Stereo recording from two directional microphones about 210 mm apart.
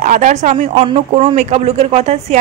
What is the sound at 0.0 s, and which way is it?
A woman's voice, 35° right (ahead or behind).